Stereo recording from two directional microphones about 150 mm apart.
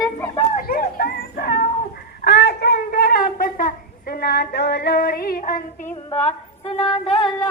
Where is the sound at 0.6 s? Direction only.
75° left (ahead or behind).